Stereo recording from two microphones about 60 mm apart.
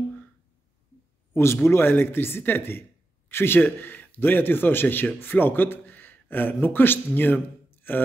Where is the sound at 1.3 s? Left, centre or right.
Left.